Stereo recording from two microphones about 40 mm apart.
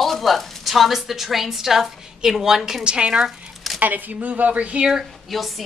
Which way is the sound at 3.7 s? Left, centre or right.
Right.